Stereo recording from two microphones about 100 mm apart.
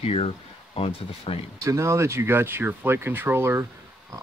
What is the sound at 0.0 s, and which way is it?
Speech, 80° left.